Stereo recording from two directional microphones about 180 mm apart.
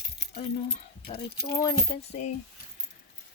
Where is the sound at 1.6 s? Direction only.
20° left (ahead or behind).